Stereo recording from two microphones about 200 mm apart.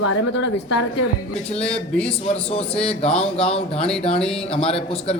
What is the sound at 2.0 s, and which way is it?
Speech, 5° left (ahead or behind).